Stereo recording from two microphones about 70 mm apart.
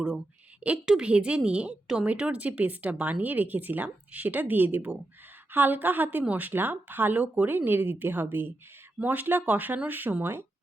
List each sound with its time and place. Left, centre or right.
0.9 s a woman's voice: centre; by 10.4 s right